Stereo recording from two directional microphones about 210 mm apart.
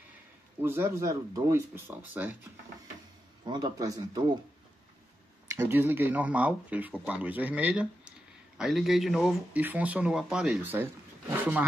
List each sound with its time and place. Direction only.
0.6 s speech: 10° right (ahead or behind)
3.4 s speech: 20° right (ahead or behind)
5.5 s speech: 10° right (ahead or behind)